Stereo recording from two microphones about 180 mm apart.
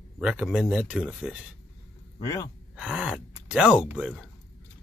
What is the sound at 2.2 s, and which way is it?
Speech, 20° left (ahead or behind).